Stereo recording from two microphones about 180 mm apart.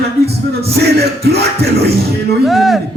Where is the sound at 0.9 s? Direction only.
65° right (ahead or behind).